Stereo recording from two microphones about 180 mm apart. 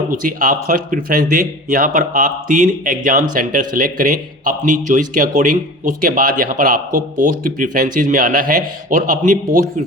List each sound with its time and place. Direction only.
0.1 s a man's voice: 50° right (ahead or behind)